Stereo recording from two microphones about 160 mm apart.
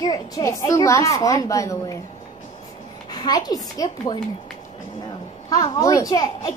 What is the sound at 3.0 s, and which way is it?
A woman's voice, 25° left (ahead or behind).